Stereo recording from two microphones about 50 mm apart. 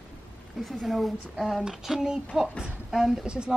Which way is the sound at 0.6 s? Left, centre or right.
Centre.